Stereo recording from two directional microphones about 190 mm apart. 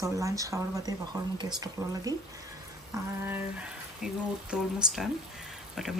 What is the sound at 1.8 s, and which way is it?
Speech, centre (ahead or behind).